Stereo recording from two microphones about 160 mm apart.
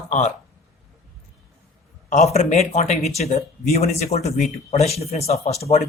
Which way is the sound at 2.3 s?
40° left (ahead or behind).